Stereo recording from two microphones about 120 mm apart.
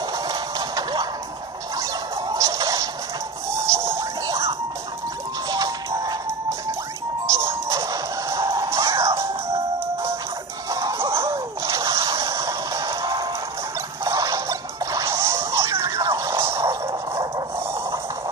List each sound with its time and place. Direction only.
0.3 s music: 35° right (ahead or behind)
1.8 s a sound: 30° right (ahead or behind)
3.6 s music: 25° right (ahead or behind)
7.2 s music: 25° right (ahead or behind)
10.7 s music: 25° right (ahead or behind)
11.6 s a sound: 25° right (ahead or behind)